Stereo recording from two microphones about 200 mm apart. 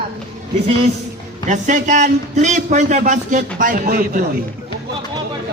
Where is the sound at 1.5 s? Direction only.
40° right (ahead or behind).